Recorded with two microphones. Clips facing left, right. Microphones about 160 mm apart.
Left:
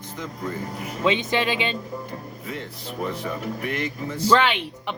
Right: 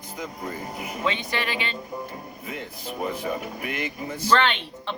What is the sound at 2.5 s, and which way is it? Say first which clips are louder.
Speech: left 1 dB; 10° right (ahead or behind).